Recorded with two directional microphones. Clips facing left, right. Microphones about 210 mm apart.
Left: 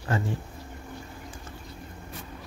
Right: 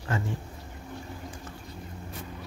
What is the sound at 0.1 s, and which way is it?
Speech, 35° left (ahead or behind).